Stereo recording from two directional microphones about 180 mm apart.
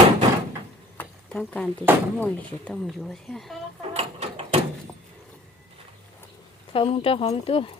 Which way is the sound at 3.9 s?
35° right (ahead or behind).